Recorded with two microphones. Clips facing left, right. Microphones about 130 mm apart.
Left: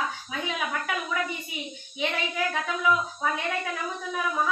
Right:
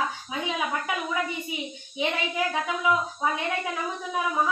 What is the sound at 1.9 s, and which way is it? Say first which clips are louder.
Speech: right 2 dB; 20° right (ahead or behind).